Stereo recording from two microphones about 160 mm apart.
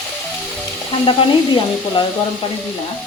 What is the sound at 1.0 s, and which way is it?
Speech, 30° left (ahead or behind).